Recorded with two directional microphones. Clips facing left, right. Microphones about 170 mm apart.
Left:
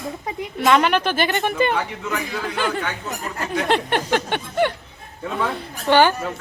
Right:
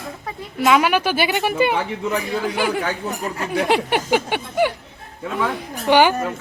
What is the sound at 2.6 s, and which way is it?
Speech, 10° right (ahead or behind).